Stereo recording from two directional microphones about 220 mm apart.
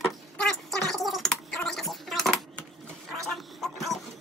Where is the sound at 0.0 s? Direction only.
Centre (ahead or behind).